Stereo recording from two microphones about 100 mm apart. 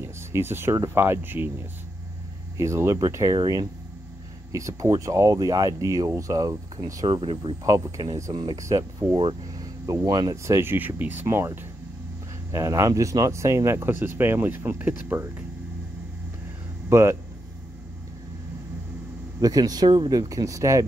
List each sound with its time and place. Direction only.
0.0 s speech: 25° right (ahead or behind)
2.5 s speech: 30° right (ahead or behind)
7.1 s speech: 65° right (ahead or behind)
8.0 s speech: 40° right (ahead or behind)
9.1 s speech: 65° right (ahead or behind)
9.8 s speech: 40° right (ahead or behind)
10.3 s speech: 30° right (ahead or behind)
16.9 s speech: 25° right (ahead or behind)
19.4 s speech: 40° right (ahead or behind)